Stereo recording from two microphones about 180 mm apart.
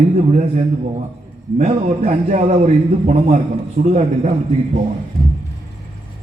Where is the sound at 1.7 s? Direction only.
30° right (ahead or behind).